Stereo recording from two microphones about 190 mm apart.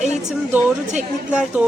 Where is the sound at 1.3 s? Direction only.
5° right (ahead or behind).